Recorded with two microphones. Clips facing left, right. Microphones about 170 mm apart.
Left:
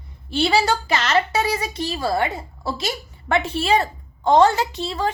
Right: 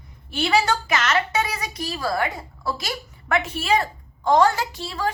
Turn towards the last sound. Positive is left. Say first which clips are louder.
# left 3 dB
turn(degrees=20)  # may be behind; listen again after turning